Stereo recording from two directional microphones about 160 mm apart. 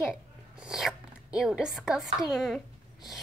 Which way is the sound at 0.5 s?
5° right (ahead or behind).